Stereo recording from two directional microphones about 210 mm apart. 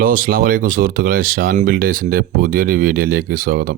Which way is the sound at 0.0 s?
40° right (ahead or behind).